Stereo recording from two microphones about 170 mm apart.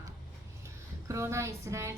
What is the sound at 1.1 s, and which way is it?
Speech, 15° right (ahead or behind).